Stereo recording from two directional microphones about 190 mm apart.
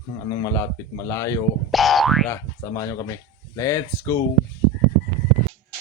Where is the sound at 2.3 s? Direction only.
15° left (ahead or behind).